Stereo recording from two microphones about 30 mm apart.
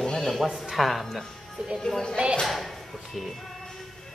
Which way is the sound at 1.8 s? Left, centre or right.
Centre.